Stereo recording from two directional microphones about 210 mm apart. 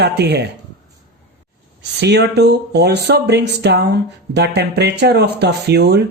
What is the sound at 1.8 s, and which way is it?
Speech, 55° right (ahead or behind).